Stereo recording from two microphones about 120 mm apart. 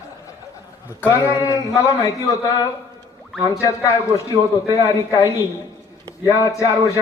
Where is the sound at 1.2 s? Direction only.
30° left (ahead or behind).